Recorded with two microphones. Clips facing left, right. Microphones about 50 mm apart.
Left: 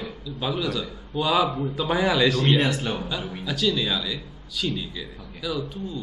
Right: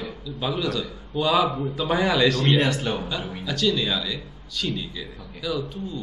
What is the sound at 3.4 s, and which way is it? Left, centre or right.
A man's voice, centre.